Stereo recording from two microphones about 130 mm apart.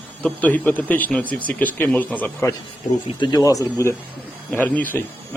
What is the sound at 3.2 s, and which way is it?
Speech, 30° left (ahead or behind).